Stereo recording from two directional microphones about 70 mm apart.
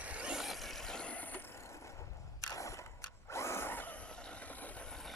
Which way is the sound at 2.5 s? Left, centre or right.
Left.